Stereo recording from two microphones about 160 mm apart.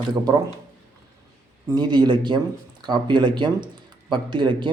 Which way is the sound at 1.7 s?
30° right (ahead or behind).